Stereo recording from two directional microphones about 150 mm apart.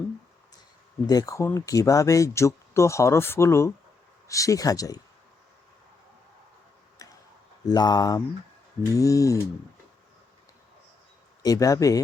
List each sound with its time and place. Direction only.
1.0 s speech: 25° left (ahead or behind)
7.0 s tick: 25° left (ahead or behind)
7.7 s speech: 25° left (ahead or behind)
11.4 s speech: 25° left (ahead or behind)